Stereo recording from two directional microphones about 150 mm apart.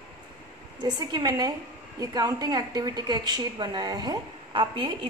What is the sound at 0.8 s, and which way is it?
A woman's voice, 25° right (ahead or behind).